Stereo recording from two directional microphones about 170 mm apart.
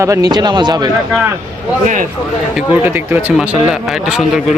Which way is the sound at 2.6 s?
10° right (ahead or behind).